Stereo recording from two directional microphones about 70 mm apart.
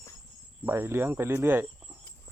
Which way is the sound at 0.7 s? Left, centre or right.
Right.